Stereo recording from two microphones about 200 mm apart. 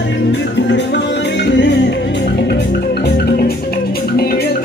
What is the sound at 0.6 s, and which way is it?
Music, 60° left (ahead or behind).